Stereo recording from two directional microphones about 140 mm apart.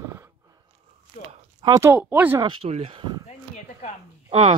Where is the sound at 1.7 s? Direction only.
15° right (ahead or behind).